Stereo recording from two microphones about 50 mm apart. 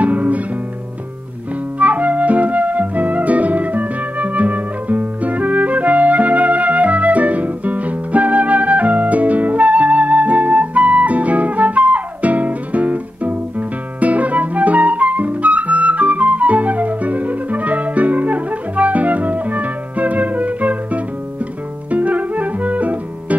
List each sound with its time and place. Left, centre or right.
0.0 s music: right
1.8 s flute: right
21.9 s music: right